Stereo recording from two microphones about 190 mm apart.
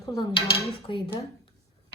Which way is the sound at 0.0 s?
20° left (ahead or behind).